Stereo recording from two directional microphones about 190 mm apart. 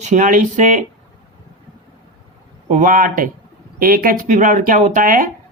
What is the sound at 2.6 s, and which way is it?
Speech, 40° right (ahead or behind).